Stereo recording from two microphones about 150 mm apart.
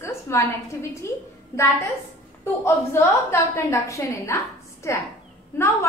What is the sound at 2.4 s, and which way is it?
A woman's voice, 15° left (ahead or behind).